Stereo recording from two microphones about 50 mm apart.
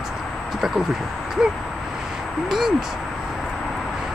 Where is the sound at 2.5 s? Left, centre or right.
Centre.